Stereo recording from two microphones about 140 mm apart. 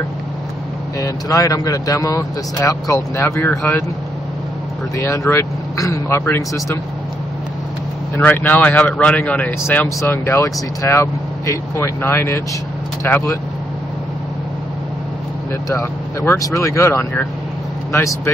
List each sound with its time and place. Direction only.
0.9 s speech: 25° left (ahead or behind)
4.9 s speech: 20° left (ahead or behind)
8.2 s speech: 10° left (ahead or behind)
15.7 s speech: 20° left (ahead or behind)